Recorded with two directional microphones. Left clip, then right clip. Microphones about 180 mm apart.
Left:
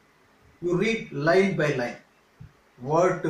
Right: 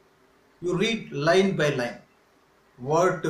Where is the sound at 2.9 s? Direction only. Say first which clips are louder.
Even; 10° right (ahead or behind).